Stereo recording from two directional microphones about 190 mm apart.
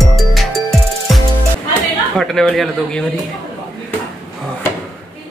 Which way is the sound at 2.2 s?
Centre (ahead or behind).